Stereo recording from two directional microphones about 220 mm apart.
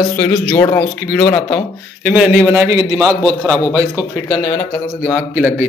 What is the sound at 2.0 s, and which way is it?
A man's voice, 5° right (ahead or behind).